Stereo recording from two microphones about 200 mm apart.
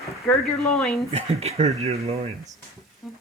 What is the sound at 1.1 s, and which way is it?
Speech, 30° right (ahead or behind).